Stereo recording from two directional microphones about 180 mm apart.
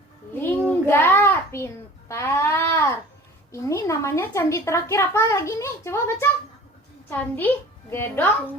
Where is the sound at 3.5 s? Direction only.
15° left (ahead or behind).